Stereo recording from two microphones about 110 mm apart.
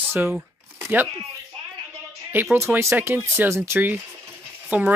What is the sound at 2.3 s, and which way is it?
Speech, 20° right (ahead or behind).